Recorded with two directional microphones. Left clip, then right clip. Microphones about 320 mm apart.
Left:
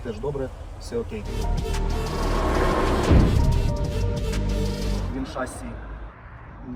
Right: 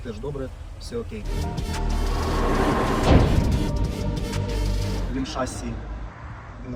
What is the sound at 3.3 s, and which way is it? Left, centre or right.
Music, centre.